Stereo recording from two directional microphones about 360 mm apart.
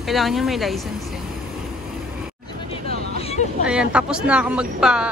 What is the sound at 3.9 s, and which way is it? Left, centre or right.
Speech, centre.